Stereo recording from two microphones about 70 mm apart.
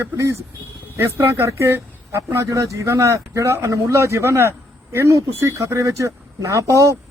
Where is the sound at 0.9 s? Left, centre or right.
Right.